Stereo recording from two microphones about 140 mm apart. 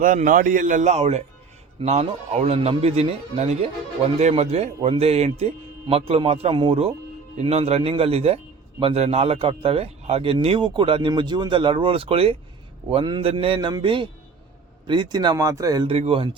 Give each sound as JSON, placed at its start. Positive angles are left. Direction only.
{"t": 0.0, "sound": "a man's voice", "side_deg": -75}
{"t": 15.9, "sound": "speech", "side_deg": -45}